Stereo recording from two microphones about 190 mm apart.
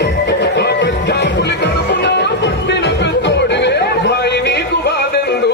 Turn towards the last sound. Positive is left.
turn(degrees=60)  # may be behind; listen again after turning